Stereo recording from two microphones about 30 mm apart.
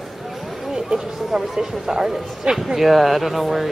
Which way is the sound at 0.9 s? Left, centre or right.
Centre.